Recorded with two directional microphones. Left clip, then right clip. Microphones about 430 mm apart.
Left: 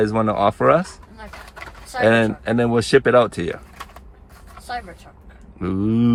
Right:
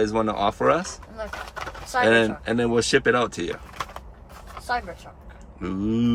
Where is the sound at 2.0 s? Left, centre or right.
Centre.